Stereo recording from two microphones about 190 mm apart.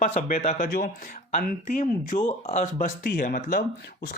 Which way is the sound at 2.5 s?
45° left (ahead or behind).